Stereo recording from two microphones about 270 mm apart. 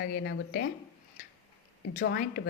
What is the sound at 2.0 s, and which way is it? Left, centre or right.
Speech, left.